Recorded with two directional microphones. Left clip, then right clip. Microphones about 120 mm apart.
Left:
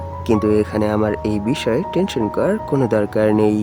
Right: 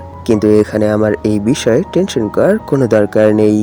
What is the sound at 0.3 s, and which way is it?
Speech, 30° right (ahead or behind).